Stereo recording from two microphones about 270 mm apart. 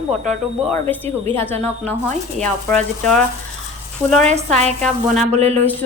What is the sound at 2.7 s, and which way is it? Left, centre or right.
Speech, centre.